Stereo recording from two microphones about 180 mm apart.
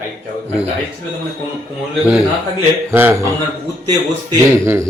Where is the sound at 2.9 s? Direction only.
10° right (ahead or behind).